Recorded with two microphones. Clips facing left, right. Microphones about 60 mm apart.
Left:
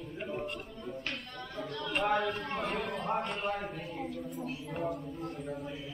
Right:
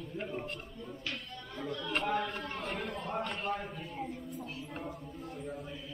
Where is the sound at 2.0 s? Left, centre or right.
Left.